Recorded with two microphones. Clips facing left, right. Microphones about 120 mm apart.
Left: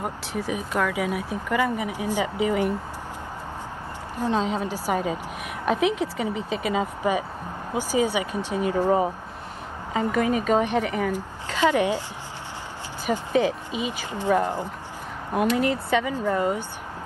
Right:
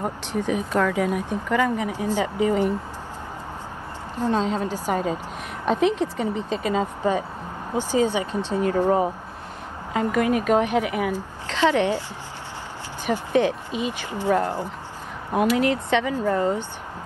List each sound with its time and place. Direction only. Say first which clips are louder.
0.0 s speech: right 3 dB; 5° left (ahead or behind)
4.2 s speech: right 2 dB; 10° left (ahead or behind)
9.9 s a woman's voice: right 2 dB; centre (ahead or behind)
11.1 s speech: right 1 dB; 15° left (ahead or behind)
13.0 s speech: right 1 dB; 10° left (ahead or behind)
15.3 s speech: right 2 dB; centre (ahead or behind)